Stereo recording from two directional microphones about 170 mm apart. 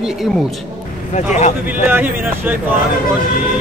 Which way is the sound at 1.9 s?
10° right (ahead or behind).